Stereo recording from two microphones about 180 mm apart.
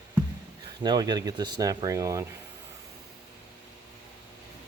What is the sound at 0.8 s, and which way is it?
Speech, 25° right (ahead or behind).